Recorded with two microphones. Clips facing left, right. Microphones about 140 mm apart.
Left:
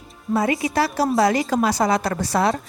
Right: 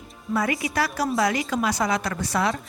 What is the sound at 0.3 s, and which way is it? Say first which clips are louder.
A woman's voice: left 4 dB; 25° left (ahead or behind).